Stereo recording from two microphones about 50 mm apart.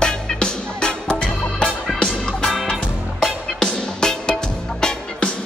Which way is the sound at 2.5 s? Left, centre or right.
Centre.